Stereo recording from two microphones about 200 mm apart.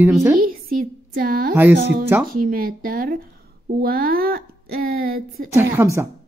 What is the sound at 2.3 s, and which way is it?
Speech, 45° right (ahead or behind).